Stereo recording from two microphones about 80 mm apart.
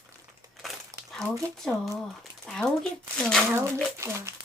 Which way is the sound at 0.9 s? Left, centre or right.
Right.